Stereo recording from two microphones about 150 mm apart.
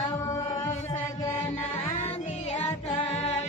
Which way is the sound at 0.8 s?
20° left (ahead or behind).